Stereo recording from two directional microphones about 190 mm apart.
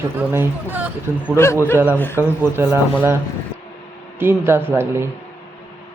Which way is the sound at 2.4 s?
10° right (ahead or behind).